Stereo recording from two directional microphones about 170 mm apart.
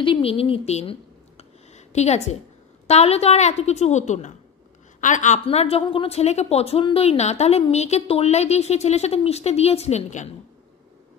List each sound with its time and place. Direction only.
0.0 s a woman's voice: 30° left (ahead or behind)
1.7 s a sound: 40° left (ahead or behind)
2.9 s a woman's voice: 40° left (ahead or behind)